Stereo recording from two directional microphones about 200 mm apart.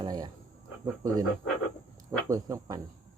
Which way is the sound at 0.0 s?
20° right (ahead or behind).